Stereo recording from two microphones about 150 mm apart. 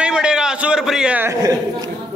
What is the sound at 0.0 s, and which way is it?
A man's voice, 5° right (ahead or behind).